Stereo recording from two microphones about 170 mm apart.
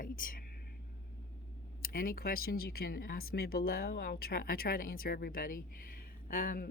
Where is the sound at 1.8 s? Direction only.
55° left (ahead or behind).